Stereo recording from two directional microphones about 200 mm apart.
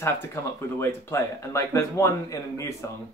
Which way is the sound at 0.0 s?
15° left (ahead or behind).